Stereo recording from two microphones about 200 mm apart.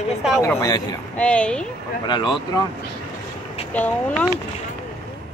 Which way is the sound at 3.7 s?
10° left (ahead or behind).